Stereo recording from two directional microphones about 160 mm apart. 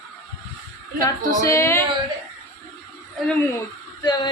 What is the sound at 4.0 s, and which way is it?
Speech, 25° left (ahead or behind).